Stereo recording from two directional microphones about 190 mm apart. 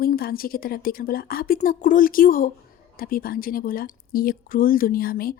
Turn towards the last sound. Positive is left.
turn(degrees=50)  # may be behind; listen again after turning